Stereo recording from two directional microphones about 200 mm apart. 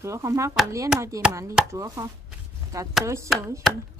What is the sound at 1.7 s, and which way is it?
A woman's voice, 15° right (ahead or behind).